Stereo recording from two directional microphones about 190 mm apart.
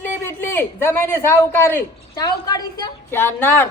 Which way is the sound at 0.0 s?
10° left (ahead or behind).